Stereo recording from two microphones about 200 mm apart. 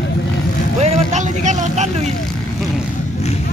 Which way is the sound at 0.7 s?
35° right (ahead or behind).